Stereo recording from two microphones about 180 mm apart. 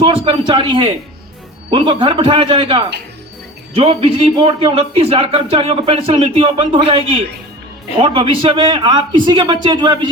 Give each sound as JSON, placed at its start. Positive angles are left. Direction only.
{"t": 0.0, "sound": "a man's voice", "side_deg": -30}